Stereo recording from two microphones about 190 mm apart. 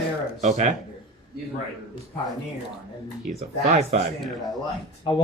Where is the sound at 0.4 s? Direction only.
40° right (ahead or behind).